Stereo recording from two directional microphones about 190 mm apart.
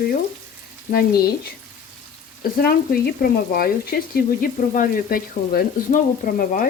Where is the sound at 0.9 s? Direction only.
50° left (ahead or behind).